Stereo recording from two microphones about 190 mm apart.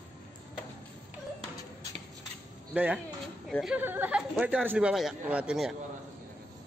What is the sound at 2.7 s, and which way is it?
Speech, 5° right (ahead or behind).